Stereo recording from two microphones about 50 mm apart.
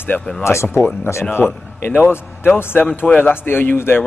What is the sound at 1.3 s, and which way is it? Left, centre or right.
Speech, left.